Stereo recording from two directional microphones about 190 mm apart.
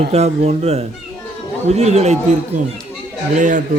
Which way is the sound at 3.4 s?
45° right (ahead or behind).